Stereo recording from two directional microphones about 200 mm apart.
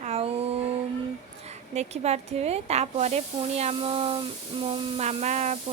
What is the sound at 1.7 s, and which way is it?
A woman's voice, 35° right (ahead or behind).